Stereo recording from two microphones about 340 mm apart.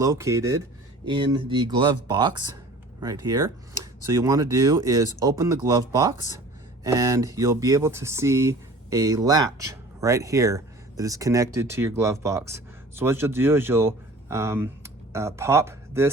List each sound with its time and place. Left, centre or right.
0.0 s speech: centre